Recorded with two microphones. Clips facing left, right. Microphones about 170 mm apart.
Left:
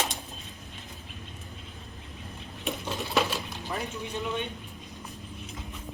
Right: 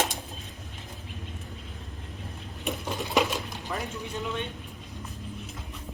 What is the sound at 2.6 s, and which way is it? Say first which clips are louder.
Sewing machine: right 1 dB; 10° right (ahead or behind).